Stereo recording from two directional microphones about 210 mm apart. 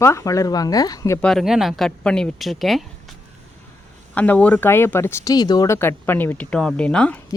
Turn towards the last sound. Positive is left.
turn(degrees=5)  # may be behind; listen again after turning